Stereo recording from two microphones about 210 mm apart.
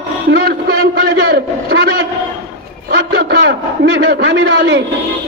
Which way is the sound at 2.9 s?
45° right (ahead or behind).